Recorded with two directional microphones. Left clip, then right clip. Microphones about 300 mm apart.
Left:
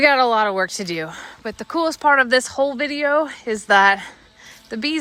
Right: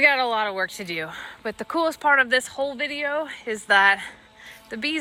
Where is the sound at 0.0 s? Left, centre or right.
Centre.